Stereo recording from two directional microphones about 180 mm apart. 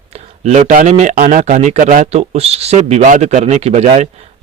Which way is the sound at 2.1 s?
35° right (ahead or behind).